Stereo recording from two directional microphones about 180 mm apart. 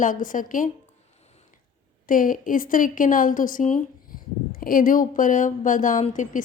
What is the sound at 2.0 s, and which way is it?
A woman's voice, 50° left (ahead or behind).